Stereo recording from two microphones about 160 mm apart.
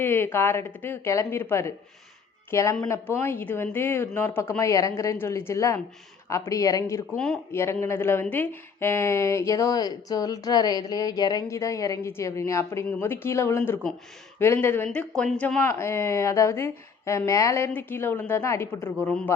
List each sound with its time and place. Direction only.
0.0 s a woman's voice: 15° left (ahead or behind)
15.6 s speech: 15° left (ahead or behind)